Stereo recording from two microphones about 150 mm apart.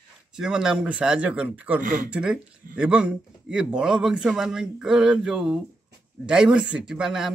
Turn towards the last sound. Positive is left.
turn(degrees=-5)  # may be behind; listen again after turning